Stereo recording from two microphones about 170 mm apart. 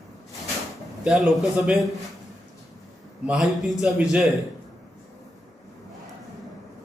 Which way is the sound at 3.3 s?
Centre (ahead or behind).